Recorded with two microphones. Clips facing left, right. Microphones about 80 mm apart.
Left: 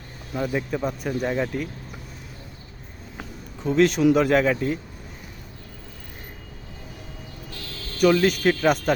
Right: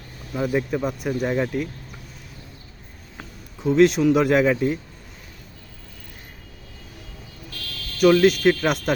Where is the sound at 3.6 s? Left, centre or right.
Centre.